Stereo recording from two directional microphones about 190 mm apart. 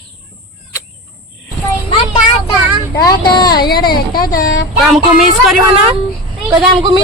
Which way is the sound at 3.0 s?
20° left (ahead or behind).